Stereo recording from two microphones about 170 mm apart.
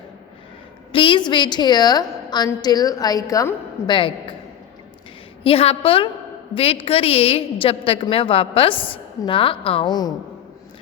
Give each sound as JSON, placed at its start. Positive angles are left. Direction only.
{"t": 0.9, "sound": "a woman's voice", "side_deg": 30}
{"t": 5.4, "sound": "a woman's voice", "side_deg": 35}